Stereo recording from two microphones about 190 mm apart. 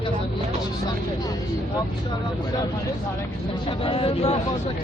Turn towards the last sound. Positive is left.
turn(degrees=30)  # may be behind; listen again after turning